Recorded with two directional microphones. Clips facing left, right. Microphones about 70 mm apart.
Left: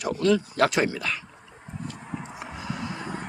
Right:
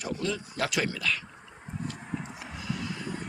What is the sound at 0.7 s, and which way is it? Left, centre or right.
Speech, left.